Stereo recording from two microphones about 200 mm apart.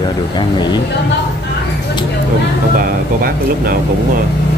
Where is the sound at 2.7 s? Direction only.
45° right (ahead or behind).